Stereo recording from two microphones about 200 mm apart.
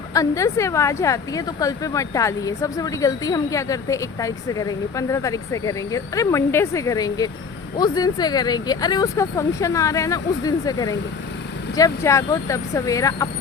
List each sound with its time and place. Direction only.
0.1 s speech: 15° left (ahead or behind)